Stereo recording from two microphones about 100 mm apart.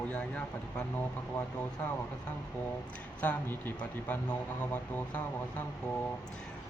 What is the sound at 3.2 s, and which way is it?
Speech, 15° left (ahead or behind).